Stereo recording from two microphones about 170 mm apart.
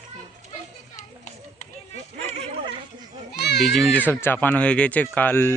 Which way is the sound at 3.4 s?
75° left (ahead or behind).